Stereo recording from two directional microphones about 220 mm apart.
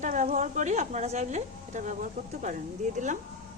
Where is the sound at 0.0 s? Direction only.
35° right (ahead or behind).